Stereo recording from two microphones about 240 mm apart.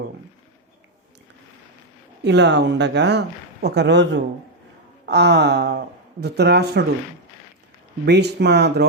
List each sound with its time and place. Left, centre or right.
2.2 s speech: right
8.0 s speech: right